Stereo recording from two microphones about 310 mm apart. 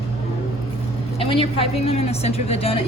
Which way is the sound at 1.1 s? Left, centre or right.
Centre.